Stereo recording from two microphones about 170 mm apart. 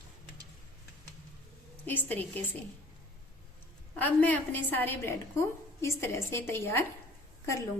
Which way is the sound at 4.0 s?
10° left (ahead or behind).